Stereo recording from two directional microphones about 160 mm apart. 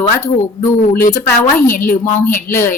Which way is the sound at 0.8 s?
60° left (ahead or behind).